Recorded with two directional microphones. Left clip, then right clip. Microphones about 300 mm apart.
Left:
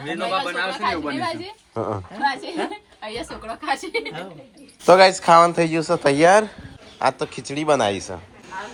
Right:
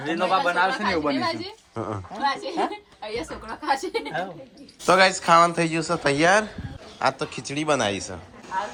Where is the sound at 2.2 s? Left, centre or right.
Left.